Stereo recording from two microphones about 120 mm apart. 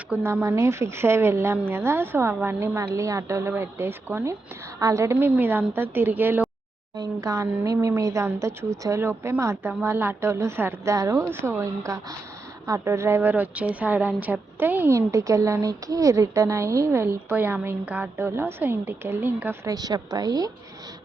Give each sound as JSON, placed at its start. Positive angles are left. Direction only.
{"t": 0.1, "sound": "a woman's voice", "side_deg": -15}
{"t": 6.9, "sound": "a woman's voice", "side_deg": -30}
{"t": 19.6, "sound": "a woman's voice", "side_deg": -35}